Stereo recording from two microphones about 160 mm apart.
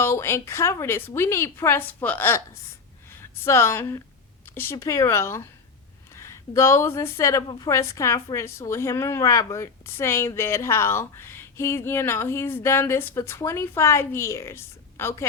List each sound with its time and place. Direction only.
0.0 s a woman's voice: 15° left (ahead or behind)